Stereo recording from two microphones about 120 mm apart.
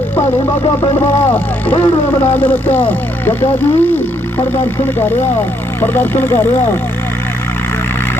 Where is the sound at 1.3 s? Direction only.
15° left (ahead or behind).